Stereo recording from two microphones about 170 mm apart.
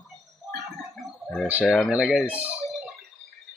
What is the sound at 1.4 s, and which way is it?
Speech, 10° right (ahead or behind).